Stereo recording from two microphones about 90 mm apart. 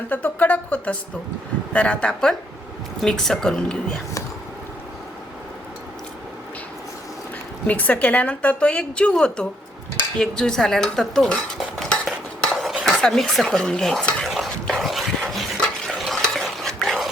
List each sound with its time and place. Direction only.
0.1 s music: 20° left (ahead or behind)
1.7 s a woman's voice: 15° left (ahead or behind)
7.7 s a woman's voice: 15° left (ahead or behind)
10.2 s dishes: 5° left (ahead or behind)
12.8 s speech: 5° left (ahead or behind)
14.3 s a sound: centre (ahead or behind)